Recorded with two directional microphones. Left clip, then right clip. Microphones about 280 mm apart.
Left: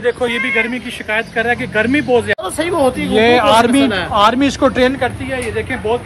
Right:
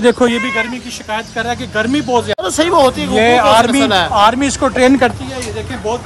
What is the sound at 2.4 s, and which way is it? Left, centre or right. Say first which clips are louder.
Speech: right 5 dB; right.